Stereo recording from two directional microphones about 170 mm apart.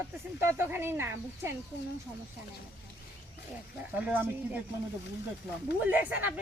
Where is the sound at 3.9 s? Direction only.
10° right (ahead or behind).